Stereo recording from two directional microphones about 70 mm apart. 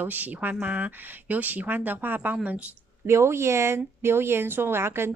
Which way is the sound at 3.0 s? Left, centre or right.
Right.